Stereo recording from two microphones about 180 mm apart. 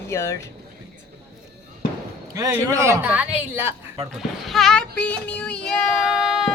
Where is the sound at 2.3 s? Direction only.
20° right (ahead or behind); by 6.5 s centre (ahead or behind).